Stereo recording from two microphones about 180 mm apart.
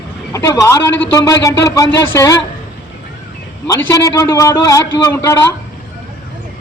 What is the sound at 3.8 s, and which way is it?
A man's voice, 15° left (ahead or behind).